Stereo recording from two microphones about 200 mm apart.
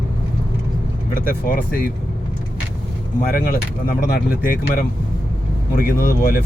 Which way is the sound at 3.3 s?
45° left (ahead or behind).